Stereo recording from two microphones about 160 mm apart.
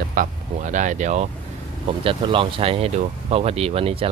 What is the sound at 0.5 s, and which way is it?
Speech, 50° right (ahead or behind).